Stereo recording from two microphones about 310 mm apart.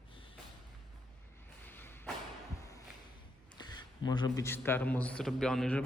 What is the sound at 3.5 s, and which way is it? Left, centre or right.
Speech, centre.